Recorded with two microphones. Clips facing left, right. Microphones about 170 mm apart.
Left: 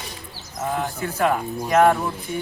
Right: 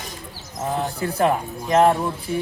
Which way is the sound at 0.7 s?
35° right (ahead or behind).